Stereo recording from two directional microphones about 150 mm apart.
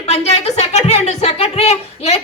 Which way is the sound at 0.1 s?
45° left (ahead or behind).